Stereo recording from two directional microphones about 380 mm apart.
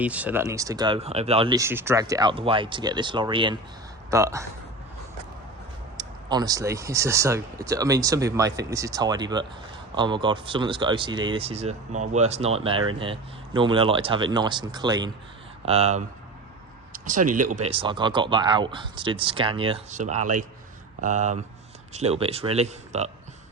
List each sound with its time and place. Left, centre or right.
0.0 s speech: centre
6.0 s speech: centre